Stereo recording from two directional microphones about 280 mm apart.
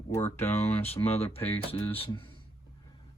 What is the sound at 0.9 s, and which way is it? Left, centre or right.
Speech, left.